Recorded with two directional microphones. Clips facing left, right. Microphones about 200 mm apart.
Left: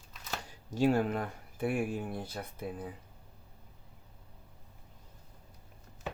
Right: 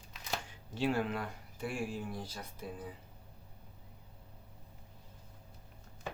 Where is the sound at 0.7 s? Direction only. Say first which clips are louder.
Left 5 dB; 45° left (ahead or behind).